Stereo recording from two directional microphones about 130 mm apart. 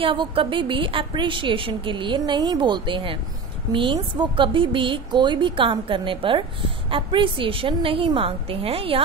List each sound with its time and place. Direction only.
0.0 s a woman's voice: 40° right (ahead or behind)